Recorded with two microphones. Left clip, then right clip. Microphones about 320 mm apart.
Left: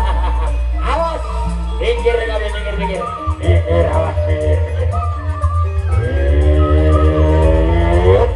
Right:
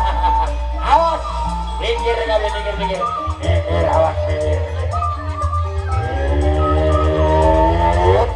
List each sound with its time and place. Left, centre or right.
0.8 s music: centre
6.5 s music: centre